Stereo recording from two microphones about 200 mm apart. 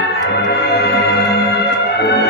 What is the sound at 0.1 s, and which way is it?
Music, 55° left (ahead or behind).